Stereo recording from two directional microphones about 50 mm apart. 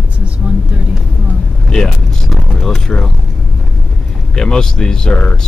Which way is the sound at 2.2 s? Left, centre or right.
Centre.